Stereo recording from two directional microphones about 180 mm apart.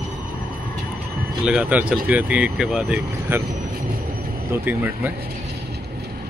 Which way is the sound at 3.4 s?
55° right (ahead or behind).